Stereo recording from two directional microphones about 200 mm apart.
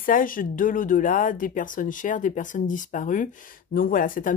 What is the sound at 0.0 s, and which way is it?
Speech, 45° left (ahead or behind).